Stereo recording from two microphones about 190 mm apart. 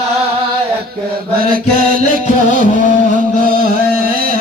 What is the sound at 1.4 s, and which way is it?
Music, 50° right (ahead or behind).